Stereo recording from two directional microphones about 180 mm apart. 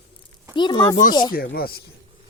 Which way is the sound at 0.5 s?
25° left (ahead or behind).